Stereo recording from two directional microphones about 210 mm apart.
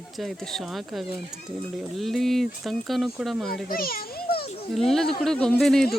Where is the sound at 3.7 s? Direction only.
45° left (ahead or behind).